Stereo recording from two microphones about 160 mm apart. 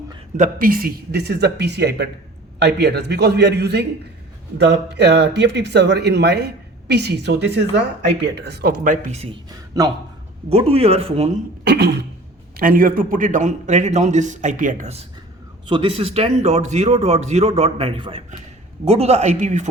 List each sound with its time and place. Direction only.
0.3 s speech: 60° right (ahead or behind)
9.5 s a man's voice: 25° right (ahead or behind)
10.5 s speech: 40° right (ahead or behind)
11.6 s speech: 90° right
12.5 s a man's voice: 60° right (ahead or behind)
15.6 s a man's voice: 35° right (ahead or behind); by 19.6 s 50° right (ahead or behind)